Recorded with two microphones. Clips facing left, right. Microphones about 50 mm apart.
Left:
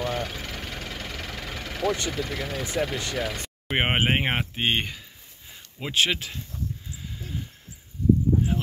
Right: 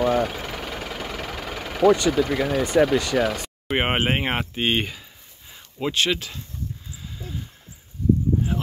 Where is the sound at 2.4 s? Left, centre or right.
Right.